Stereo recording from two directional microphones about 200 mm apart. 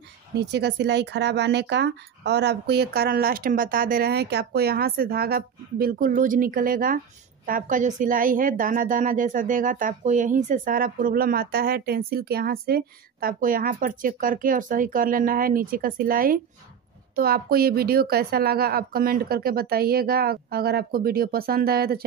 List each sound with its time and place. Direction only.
0.4 s a woman's voice: 55° right (ahead or behind)